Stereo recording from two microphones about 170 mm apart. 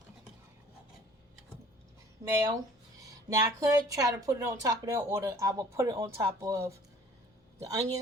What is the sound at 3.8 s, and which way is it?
Speech, 20° right (ahead or behind).